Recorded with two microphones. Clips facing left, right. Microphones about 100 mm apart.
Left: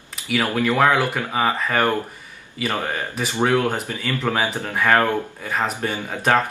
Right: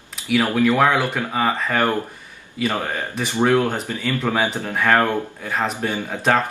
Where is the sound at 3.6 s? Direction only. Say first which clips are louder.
Right 1 dB; 5° left (ahead or behind).